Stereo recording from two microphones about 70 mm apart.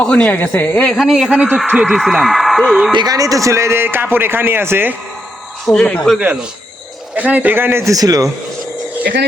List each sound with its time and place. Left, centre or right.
0.0 s a woman's voice: centre
0.9 s speech: centre
2.9 s a man's voice: right
3.2 s a man's voice: right
3.8 s speech: right
5.6 s speech: centre
7.2 s speech: right
7.9 s speech: right